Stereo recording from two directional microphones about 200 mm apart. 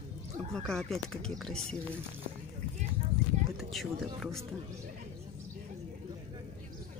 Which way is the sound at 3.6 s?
Centre (ahead or behind).